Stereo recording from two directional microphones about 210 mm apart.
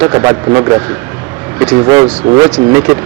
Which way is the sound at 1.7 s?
20° right (ahead or behind).